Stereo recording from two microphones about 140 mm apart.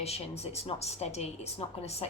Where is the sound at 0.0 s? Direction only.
50° left (ahead or behind).